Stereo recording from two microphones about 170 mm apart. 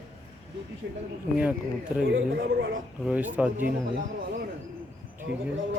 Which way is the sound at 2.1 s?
90° right.